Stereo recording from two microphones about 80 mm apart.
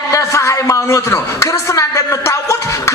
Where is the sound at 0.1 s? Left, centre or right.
Left.